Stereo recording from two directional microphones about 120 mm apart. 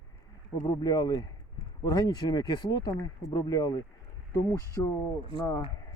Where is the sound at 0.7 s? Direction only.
30° left (ahead or behind).